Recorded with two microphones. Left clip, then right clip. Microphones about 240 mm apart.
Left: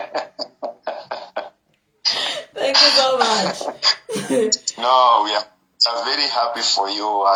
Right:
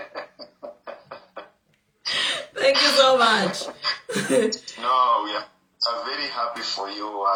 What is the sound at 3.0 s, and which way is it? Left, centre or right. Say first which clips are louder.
Speech: even; centre.